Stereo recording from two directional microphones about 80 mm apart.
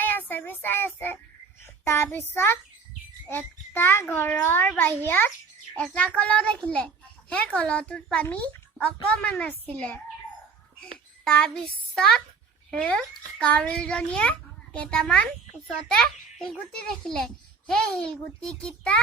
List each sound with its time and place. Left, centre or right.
0.0 s child singing: left
1.6 s a child's voice: left
5.8 s a child's voice: centre
11.3 s a child's voice: centre
16.4 s a child's voice: centre